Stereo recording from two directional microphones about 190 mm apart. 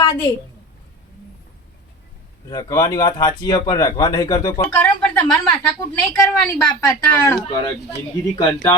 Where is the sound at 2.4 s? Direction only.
20° left (ahead or behind).